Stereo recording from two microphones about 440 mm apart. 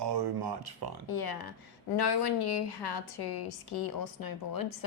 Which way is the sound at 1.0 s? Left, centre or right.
Left.